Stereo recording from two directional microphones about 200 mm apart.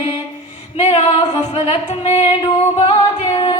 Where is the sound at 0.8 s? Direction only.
30° left (ahead or behind).